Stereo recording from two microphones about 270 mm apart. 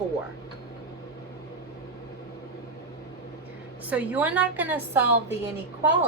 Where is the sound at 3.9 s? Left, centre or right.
Centre.